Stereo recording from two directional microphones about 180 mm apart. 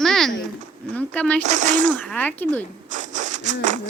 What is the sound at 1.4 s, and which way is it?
Speech, 40° right (ahead or behind).